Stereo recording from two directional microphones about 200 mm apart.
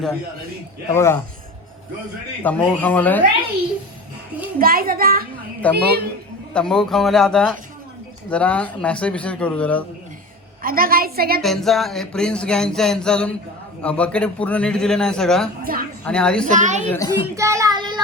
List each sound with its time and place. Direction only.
0.9 s speech: 10° left (ahead or behind)
2.4 s speech: 10° left (ahead or behind)
4.6 s a woman's voice: 45° right (ahead or behind)
6.5 s a sound: 5° left (ahead or behind)
8.3 s speech: 5° left (ahead or behind)
10.6 s a woman's voice: 45° right (ahead or behind)
11.4 s a sound: centre (ahead or behind)
15.6 s a woman's voice: 45° right (ahead or behind)
16.0 s a sound: 5° left (ahead or behind)
16.5 s a woman's voice: 40° right (ahead or behind)
17.1 s child singing: 15° right (ahead or behind)